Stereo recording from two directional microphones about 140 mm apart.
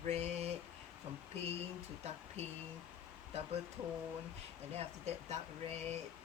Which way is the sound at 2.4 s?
50° right (ahead or behind).